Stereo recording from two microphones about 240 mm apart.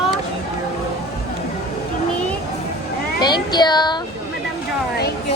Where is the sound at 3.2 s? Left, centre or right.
Centre.